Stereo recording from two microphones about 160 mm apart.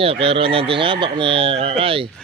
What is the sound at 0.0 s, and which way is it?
Speech, 35° right (ahead or behind).